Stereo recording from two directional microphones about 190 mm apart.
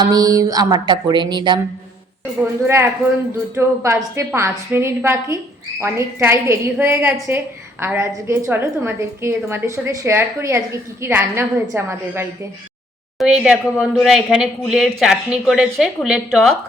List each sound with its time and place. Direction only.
0.0 s mantra: 20° right (ahead or behind)
2.4 s a woman's voice: 10° right (ahead or behind)
13.1 s speech: centre (ahead or behind)